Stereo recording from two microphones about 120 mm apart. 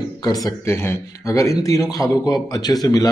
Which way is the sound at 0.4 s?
20° left (ahead or behind).